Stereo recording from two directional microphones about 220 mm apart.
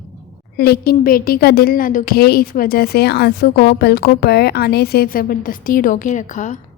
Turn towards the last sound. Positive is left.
turn(degrees=35)  # may be behind; listen again after turning